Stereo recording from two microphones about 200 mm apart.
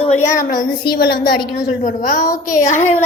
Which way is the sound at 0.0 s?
35° left (ahead or behind).